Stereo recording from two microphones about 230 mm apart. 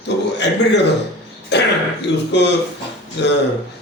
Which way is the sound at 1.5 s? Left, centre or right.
Left.